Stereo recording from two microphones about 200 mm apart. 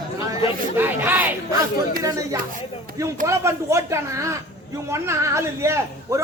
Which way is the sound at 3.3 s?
15° right (ahead or behind).